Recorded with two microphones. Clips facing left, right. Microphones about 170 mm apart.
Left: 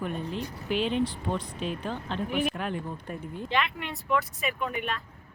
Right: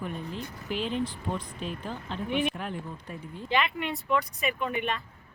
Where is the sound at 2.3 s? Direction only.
Centre (ahead or behind).